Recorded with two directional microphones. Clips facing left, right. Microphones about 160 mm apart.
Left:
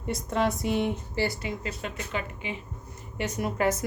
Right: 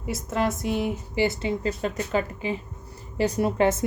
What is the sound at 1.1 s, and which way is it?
A woman's voice, 20° right (ahead or behind).